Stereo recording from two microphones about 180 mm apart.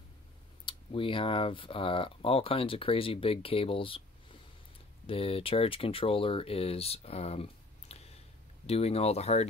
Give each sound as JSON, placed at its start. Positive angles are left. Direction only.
{"t": 0.7, "sound": "speech", "side_deg": 30}